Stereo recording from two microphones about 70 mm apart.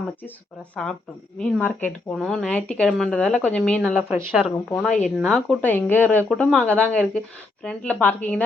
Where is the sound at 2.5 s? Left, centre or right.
Centre.